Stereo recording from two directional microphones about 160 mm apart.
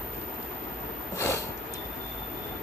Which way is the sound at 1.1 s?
20° left (ahead or behind).